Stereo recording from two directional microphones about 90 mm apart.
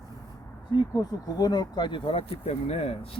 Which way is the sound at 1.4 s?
50° left (ahead or behind).